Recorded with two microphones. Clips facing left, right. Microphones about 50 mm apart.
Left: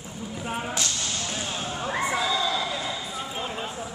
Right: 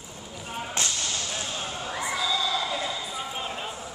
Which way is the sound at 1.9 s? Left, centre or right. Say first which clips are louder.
Left 3 dB; left.